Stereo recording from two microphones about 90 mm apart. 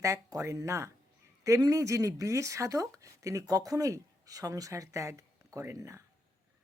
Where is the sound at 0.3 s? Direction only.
35° right (ahead or behind).